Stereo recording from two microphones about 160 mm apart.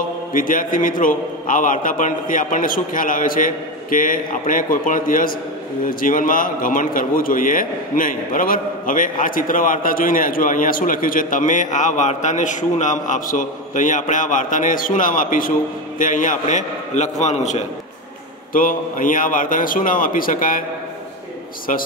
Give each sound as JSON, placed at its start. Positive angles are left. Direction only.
{"t": 0.3, "sound": "a man's voice", "side_deg": 55}
{"t": 18.5, "sound": "a man's voice", "side_deg": 60}